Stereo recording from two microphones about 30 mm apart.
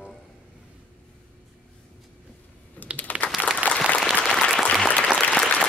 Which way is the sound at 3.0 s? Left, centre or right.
Left.